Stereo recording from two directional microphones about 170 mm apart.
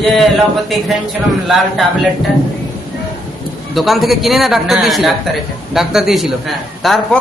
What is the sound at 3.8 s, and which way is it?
A man's voice, centre (ahead or behind).